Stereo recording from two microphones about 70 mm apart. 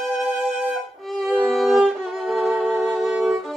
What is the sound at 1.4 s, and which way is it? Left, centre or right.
Music, centre.